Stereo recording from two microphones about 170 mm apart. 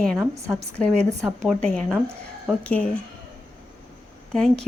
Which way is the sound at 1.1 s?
15° right (ahead or behind).